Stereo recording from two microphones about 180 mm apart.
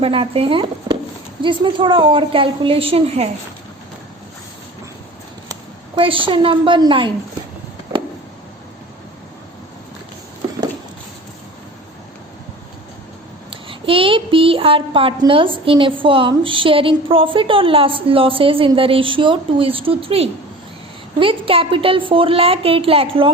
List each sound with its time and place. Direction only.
0.0 s a woman's voice: 30° right (ahead or behind)
6.0 s a woman's voice: 30° right (ahead or behind)
13.5 s a woman's voice: 30° right (ahead or behind)